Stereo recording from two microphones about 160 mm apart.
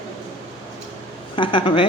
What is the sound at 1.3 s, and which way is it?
Speech, 30° left (ahead or behind).